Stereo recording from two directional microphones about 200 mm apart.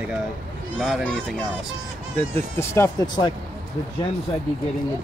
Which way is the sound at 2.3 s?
10° left (ahead or behind).